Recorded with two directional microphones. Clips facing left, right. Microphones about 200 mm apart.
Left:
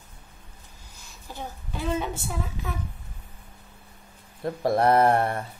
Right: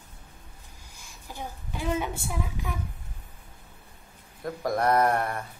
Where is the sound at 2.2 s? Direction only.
15° right (ahead or behind).